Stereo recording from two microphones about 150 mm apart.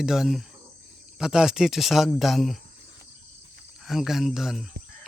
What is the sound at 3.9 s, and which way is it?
Speech, centre (ahead or behind).